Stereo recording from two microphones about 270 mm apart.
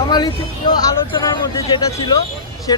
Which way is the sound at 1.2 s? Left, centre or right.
Centre.